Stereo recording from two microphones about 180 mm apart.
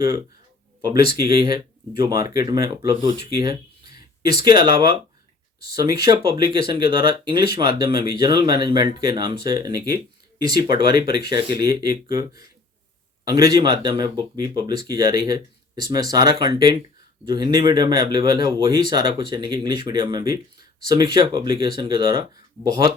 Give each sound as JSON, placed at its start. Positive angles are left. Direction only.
{"t": 0.8, "sound": "speech", "side_deg": -20}
{"t": 3.9, "sound": "a sound", "side_deg": -20}
{"t": 4.4, "sound": "speech", "side_deg": -25}